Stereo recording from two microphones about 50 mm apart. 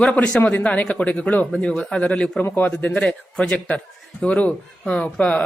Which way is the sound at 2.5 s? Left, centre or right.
Left.